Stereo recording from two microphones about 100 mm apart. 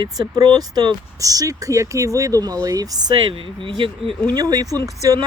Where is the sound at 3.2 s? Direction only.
60° right (ahead or behind).